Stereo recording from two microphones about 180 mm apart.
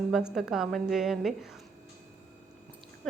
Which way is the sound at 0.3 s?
Centre (ahead or behind).